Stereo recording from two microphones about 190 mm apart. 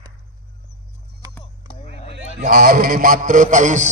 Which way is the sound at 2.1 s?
50° right (ahead or behind).